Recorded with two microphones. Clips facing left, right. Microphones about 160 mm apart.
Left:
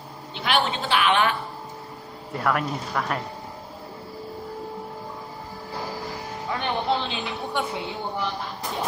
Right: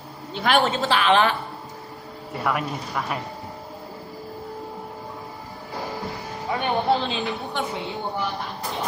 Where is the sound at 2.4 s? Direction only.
5° right (ahead or behind).